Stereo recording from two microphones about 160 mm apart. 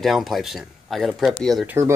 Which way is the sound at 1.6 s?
15° right (ahead or behind).